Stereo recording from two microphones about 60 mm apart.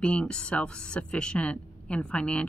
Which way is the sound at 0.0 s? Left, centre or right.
Centre.